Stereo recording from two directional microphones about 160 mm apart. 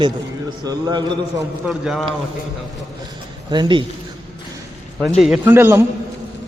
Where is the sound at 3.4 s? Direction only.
30° right (ahead or behind).